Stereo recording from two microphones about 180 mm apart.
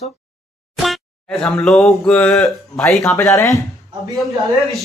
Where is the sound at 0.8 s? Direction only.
Centre (ahead or behind).